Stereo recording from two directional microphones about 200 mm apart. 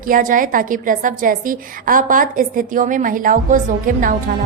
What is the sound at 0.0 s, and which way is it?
A woman's voice, 45° right (ahead or behind).